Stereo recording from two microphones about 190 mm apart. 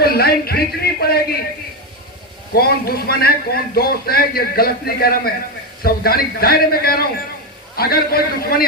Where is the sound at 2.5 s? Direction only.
55° left (ahead or behind).